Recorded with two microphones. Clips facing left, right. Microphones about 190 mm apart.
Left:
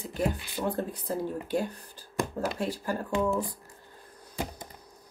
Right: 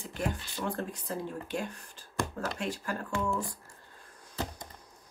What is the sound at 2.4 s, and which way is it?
Speech, 25° left (ahead or behind).